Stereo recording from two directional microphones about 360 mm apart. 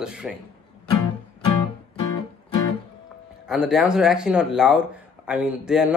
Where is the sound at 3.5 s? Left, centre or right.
Centre.